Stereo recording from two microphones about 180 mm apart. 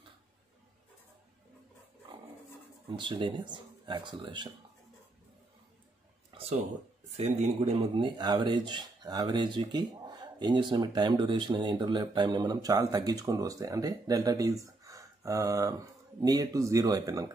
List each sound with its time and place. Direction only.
2.9 s speech: 25° right (ahead or behind)
6.3 s a sound: 35° right (ahead or behind)
7.2 s speech: 40° right (ahead or behind); by 17.3 s 20° right (ahead or behind)